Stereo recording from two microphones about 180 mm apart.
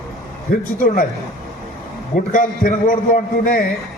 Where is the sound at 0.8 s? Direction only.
50° left (ahead or behind).